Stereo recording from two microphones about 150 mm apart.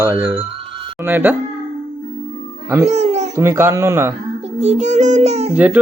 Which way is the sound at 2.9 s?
50° right (ahead or behind).